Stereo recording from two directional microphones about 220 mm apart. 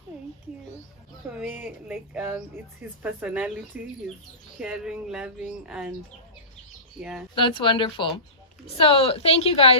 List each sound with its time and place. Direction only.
1.3 s speech: 5° right (ahead or behind)
7.0 s speech: 5° right (ahead or behind)
7.3 s speech: 20° left (ahead or behind)